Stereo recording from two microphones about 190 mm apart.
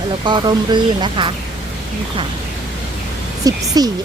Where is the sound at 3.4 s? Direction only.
20° right (ahead or behind).